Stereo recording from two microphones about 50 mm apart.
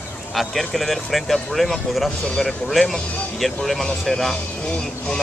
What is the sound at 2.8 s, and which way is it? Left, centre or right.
Speech, centre.